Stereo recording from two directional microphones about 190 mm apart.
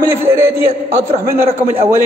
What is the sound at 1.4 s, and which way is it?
Speech, 30° right (ahead or behind).